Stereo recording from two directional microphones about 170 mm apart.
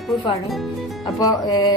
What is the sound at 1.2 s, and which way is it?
Speech, 20° left (ahead or behind).